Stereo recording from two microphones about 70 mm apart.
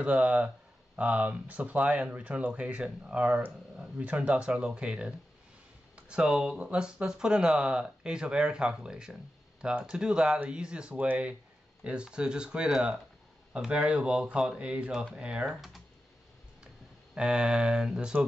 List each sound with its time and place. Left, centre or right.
0.0 s speech: centre
17.1 s speech: centre